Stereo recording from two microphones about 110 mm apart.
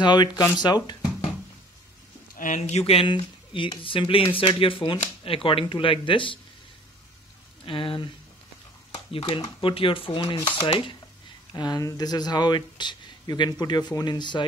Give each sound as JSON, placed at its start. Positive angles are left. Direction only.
{"t": 0.0, "sound": "speech", "side_deg": 40}
{"t": 2.5, "sound": "speech", "side_deg": 70}
{"t": 3.1, "sound": "speech", "side_deg": 50}
{"t": 7.6, "sound": "speech", "side_deg": 55}
{"t": 8.9, "sound": "a sound", "side_deg": 60}
{"t": 9.4, "sound": "speech", "side_deg": 55}
{"t": 11.5, "sound": "speech", "side_deg": 35}